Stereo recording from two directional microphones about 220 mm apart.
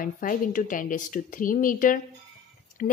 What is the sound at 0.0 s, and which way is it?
A woman's voice, 40° left (ahead or behind).